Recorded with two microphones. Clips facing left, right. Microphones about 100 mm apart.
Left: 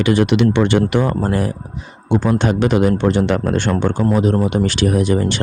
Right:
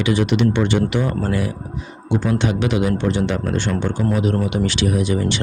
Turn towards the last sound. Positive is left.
turn(degrees=45)  # may be behind; listen again after turning